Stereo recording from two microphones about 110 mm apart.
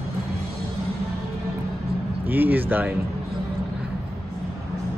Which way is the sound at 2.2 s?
15° right (ahead or behind).